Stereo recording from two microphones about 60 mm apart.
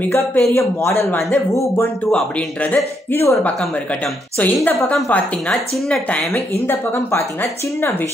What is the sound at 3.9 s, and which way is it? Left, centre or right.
Speech, left.